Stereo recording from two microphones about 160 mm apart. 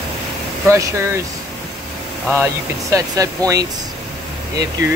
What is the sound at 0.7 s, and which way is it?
Speech, 20° right (ahead or behind).